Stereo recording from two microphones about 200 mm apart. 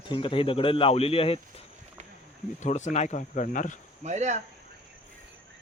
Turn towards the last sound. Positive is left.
turn(degrees=-35)  # may be behind; listen again after turning